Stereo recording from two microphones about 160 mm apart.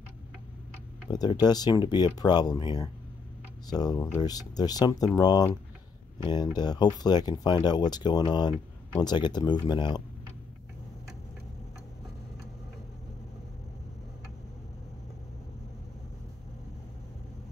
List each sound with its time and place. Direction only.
1.1 s speech: 25° left (ahead or behind)